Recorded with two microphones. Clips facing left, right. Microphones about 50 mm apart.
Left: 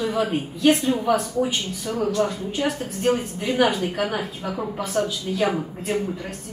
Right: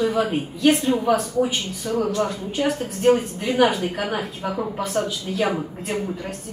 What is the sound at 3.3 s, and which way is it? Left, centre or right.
A woman's voice, centre.